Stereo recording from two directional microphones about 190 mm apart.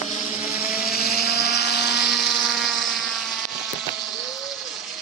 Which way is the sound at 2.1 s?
Centre (ahead or behind).